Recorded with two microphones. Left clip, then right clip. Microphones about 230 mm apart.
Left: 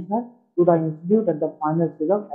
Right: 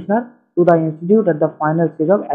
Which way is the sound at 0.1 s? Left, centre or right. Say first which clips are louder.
Right 5 dB; centre.